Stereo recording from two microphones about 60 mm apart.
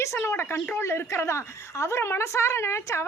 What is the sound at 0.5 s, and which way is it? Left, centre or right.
Speech, left.